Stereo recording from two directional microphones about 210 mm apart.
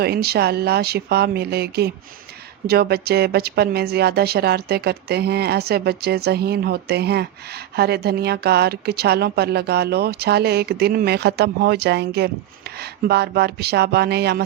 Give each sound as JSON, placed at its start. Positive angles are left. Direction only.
{"t": 0.0, "sound": "a woman's voice", "side_deg": -50}